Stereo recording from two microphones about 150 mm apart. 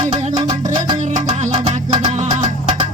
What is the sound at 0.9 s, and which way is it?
Music, 55° right (ahead or behind).